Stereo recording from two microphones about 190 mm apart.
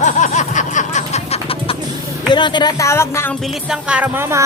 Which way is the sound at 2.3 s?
25° left (ahead or behind).